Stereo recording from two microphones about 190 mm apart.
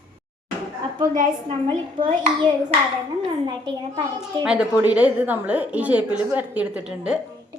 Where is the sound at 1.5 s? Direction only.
25° right (ahead or behind).